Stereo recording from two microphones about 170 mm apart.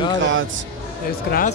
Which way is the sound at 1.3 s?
80° left.